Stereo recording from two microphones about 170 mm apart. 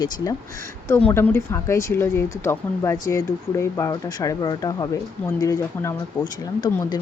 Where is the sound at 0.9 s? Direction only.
10° left (ahead or behind).